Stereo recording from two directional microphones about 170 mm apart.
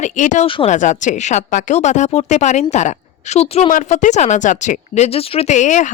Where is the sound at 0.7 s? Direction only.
45° left (ahead or behind).